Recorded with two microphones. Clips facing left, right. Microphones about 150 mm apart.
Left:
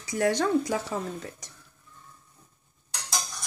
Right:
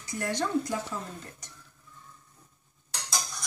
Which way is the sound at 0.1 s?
80° left.